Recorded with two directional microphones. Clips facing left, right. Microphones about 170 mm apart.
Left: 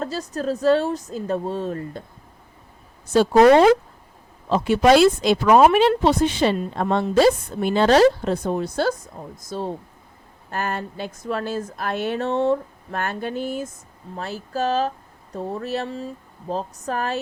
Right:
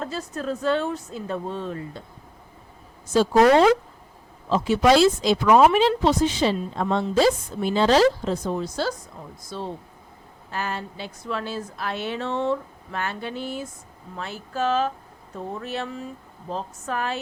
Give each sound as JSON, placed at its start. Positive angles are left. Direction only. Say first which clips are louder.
{"t": 0.0, "sound": "a woman's voice", "louder": "left 4 dB", "side_deg": 40}
{"t": 3.3, "sound": "speech", "louder": "left 4 dB", "side_deg": 20}
{"t": 4.4, "sound": "a woman's voice", "louder": "left 2 dB", "side_deg": 55}
{"t": 9.5, "sound": "a woman's voice", "louder": "left 4 dB", "side_deg": 45}